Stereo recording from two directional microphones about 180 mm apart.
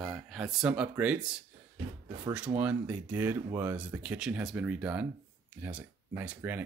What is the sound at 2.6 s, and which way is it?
Speech, 5° right (ahead or behind).